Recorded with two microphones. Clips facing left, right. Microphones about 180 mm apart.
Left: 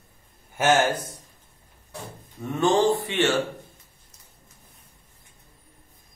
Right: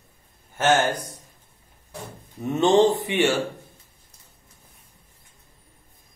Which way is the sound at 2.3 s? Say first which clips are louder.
Right 4 dB; 20° right (ahead or behind).